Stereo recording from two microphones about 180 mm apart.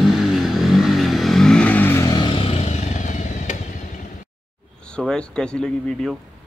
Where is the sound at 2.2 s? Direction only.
30° left (ahead or behind).